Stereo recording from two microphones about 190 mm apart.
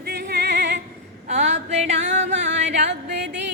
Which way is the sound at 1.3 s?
35° right (ahead or behind).